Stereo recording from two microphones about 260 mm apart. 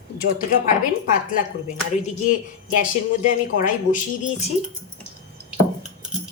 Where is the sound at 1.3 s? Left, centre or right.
Left.